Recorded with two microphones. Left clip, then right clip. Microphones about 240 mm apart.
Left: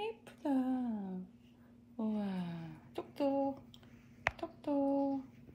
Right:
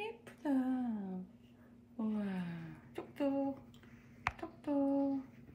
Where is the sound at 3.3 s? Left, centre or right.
Centre.